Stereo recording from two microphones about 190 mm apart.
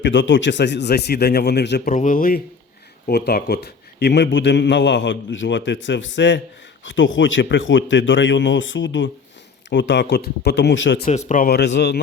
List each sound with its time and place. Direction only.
0.0 s speech: 70° left (ahead or behind)
1.9 s a man's voice: 40° left (ahead or behind); by 6.4 s 70° left (ahead or behind)
6.8 s a man's voice: 80° left
11.3 s speech: 50° left (ahead or behind)